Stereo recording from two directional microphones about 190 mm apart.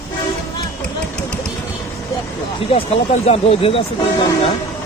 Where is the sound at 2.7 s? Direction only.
30° left (ahead or behind).